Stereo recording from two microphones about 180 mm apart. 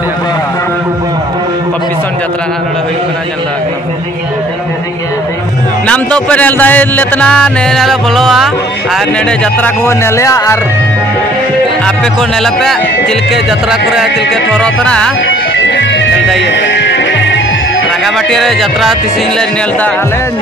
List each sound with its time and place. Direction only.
5.9 s speech: 5° left (ahead or behind)
9.8 s speech: 15° left (ahead or behind)
11.8 s speech: 5° left (ahead or behind)
15.5 s music: 90° left
18.0 s speech: centre (ahead or behind)